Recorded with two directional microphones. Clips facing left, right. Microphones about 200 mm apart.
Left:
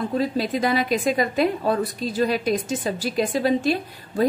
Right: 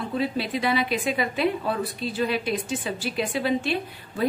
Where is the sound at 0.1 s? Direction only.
40° left (ahead or behind).